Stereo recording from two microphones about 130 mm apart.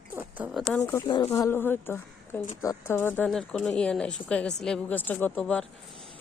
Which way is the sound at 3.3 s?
5° left (ahead or behind).